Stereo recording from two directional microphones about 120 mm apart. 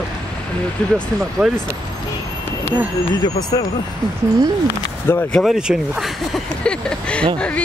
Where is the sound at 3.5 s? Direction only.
35° left (ahead or behind).